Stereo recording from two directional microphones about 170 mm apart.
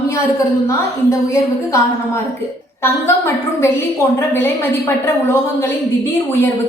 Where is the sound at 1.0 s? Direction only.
20° left (ahead or behind).